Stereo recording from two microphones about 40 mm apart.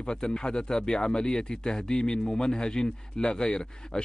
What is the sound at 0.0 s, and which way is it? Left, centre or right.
Speech, left.